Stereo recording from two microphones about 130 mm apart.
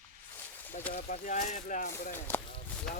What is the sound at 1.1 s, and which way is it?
Speech, 75° left (ahead or behind).